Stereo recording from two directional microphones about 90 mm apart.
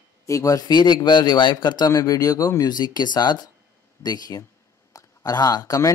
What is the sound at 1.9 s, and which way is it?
A man's voice, 40° left (ahead or behind).